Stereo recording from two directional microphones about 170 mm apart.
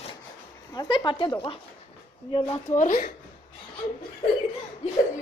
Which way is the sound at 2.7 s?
50° left (ahead or behind).